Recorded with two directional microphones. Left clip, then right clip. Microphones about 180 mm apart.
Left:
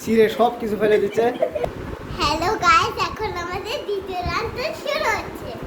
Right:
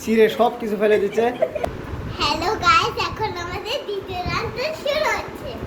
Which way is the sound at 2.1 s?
55° left (ahead or behind).